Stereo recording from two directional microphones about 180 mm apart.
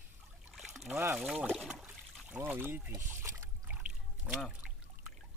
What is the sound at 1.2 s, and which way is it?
Trickle, centre (ahead or behind).